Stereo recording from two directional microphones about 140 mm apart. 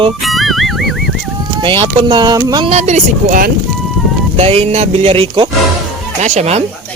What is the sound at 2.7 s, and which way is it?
Speech, 55° right (ahead or behind).